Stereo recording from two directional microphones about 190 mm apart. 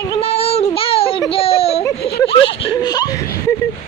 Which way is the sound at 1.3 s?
30° left (ahead or behind).